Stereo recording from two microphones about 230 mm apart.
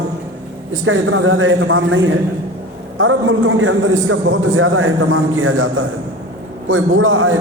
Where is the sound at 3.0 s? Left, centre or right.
Right.